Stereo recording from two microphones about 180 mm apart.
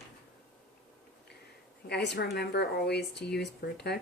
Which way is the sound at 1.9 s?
70° left (ahead or behind).